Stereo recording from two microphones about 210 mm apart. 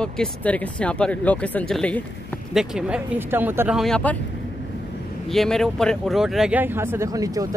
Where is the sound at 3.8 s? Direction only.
5° left (ahead or behind).